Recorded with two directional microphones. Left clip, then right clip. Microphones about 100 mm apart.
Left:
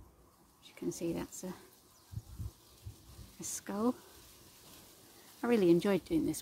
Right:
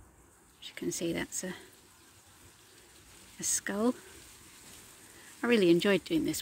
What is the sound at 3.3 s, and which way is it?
Speech, 15° right (ahead or behind).